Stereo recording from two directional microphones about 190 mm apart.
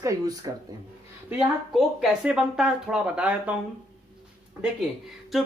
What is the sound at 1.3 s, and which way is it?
Speech, 5° right (ahead or behind).